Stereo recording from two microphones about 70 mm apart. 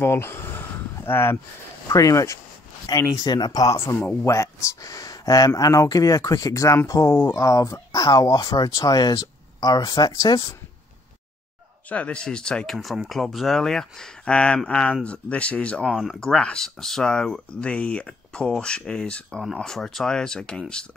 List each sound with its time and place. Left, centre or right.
0.0 s speech: left
1.9 s speech: left
2.9 s speech: left
3.3 s speech: left
3.8 s speech: left
7.1 s speech: left
7.3 s speech: left
11.9 s speech: centre
12.7 s speech: centre
15.9 s speech: centre
16.2 s speech: centre